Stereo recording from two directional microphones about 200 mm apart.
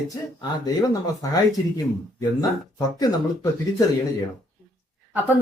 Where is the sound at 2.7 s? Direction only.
20° left (ahead or behind).